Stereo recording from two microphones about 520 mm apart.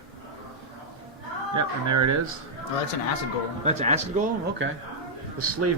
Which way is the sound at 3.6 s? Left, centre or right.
Centre.